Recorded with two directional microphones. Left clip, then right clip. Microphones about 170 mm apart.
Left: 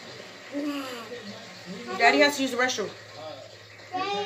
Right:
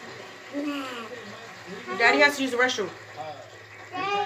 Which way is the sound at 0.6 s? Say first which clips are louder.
Even; 35° left (ahead or behind).